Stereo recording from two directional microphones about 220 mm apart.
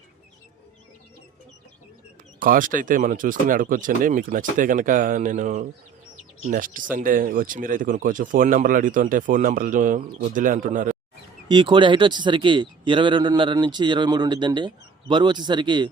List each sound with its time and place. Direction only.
2.4 s speech: 40° right (ahead or behind)
11.4 s a man's voice: 20° right (ahead or behind)